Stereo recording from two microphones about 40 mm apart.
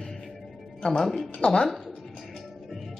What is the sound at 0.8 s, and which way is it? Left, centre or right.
Speech, centre.